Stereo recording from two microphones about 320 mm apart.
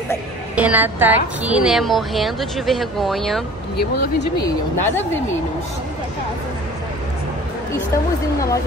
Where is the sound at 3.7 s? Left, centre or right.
Left.